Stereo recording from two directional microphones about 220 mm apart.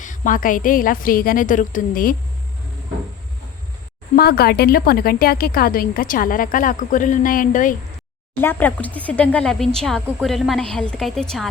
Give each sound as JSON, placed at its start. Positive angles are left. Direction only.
{"t": 0.0, "sound": "speech", "side_deg": 35}
{"t": 4.1, "sound": "speech", "side_deg": 45}
{"t": 8.4, "sound": "speech", "side_deg": 10}